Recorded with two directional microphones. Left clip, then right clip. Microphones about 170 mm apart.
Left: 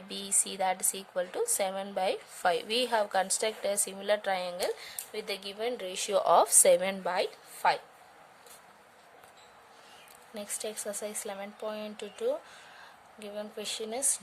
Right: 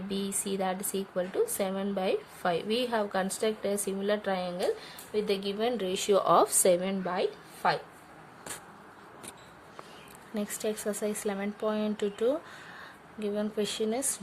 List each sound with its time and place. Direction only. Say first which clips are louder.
0.1 s a woman's voice: right 1 dB; 45° left (ahead or behind)
10.3 s speech: right 5 dB; 25° left (ahead or behind)